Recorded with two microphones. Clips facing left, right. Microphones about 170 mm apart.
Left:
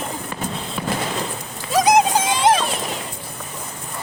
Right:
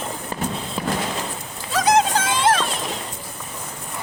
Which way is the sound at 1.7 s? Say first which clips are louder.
Left 3 dB; 15° left (ahead or behind).